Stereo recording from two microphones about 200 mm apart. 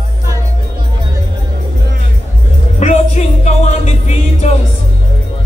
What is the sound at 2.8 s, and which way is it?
Music, 35° left (ahead or behind).